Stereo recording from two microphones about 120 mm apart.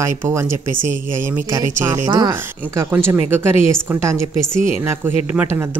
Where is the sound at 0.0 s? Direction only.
25° right (ahead or behind).